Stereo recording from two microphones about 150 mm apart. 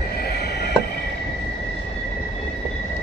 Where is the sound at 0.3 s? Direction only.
90° left.